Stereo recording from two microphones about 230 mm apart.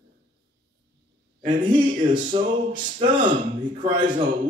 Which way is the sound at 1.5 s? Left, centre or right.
Right.